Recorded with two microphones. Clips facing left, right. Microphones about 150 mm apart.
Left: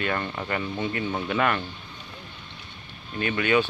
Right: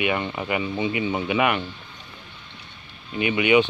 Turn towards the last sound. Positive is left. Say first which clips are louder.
# right 4 dB
turn(degrees=-10)  # may be behind; listen again after turning